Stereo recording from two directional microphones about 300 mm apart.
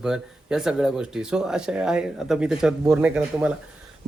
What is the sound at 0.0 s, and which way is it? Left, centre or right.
Speech, centre.